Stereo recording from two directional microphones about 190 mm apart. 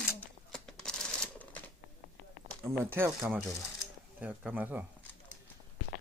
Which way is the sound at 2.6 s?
10° right (ahead or behind).